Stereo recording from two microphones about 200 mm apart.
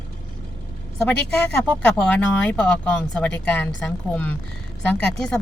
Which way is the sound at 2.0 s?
5° left (ahead or behind).